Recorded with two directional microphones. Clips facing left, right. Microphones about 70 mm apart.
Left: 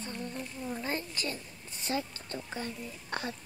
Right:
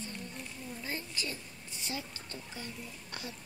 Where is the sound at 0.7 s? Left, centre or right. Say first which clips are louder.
Left 5 dB; left.